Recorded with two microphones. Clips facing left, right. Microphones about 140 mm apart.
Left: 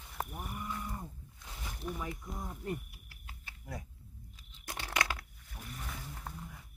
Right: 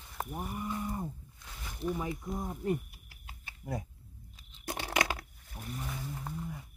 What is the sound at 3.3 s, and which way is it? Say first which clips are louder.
Typing: right 7 dB; 25° right (ahead or behind).